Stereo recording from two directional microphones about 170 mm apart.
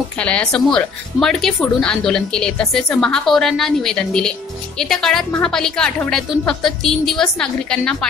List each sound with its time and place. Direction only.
0.2 s speech: 5° left (ahead or behind)